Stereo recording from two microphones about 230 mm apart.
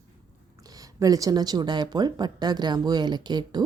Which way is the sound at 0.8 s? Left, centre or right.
Centre.